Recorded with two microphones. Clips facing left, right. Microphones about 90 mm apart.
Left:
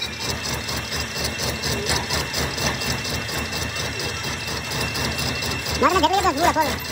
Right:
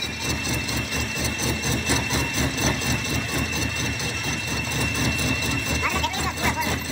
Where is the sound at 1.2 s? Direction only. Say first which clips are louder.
Even; 35° right (ahead or behind).